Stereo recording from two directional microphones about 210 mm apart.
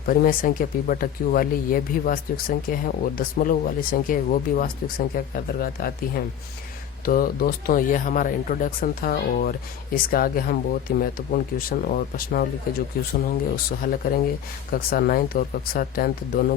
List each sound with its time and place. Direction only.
0.0 s speech: 45° left (ahead or behind)